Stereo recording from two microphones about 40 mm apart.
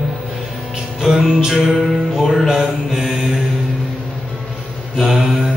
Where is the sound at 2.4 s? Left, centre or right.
Centre.